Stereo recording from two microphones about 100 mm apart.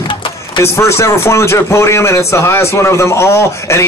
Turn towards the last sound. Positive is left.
turn(degrees=30)  # may be behind; listen again after turning